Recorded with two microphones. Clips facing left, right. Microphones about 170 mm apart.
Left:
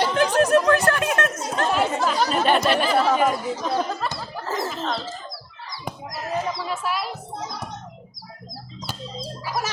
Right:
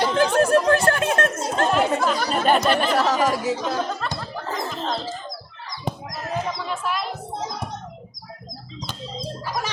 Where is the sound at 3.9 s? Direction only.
5° left (ahead or behind).